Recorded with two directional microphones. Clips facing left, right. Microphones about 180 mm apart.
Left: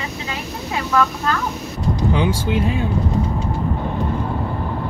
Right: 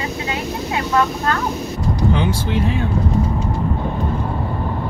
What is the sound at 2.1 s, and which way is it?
Speech, 15° left (ahead or behind).